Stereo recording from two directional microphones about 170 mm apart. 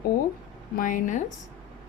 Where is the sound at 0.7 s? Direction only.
50° left (ahead or behind).